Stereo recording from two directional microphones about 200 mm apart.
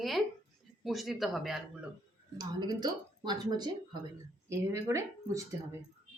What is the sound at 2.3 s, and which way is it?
Speech, 20° right (ahead or behind).